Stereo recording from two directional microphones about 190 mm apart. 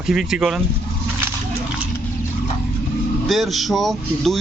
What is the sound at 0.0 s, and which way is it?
Speech, centre (ahead or behind).